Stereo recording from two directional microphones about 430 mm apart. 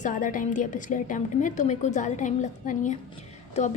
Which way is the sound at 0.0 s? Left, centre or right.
Centre.